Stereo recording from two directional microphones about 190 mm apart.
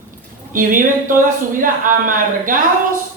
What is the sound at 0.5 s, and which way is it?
A man's voice, 45° right (ahead or behind).